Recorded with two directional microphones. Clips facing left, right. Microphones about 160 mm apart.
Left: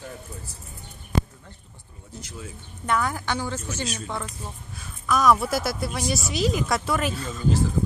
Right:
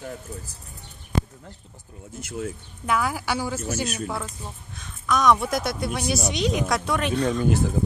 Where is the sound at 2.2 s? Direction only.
60° right (ahead or behind).